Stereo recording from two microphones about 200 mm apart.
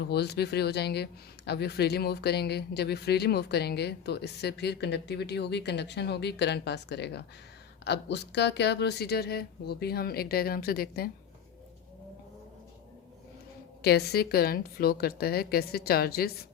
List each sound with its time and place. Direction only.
0.1 s speech: 55° left (ahead or behind)
13.8 s speech: 55° left (ahead or behind)